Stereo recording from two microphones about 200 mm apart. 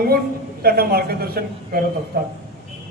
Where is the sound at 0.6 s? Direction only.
50° right (ahead or behind).